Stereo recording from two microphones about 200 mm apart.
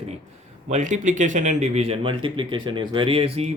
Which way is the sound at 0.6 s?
35° right (ahead or behind).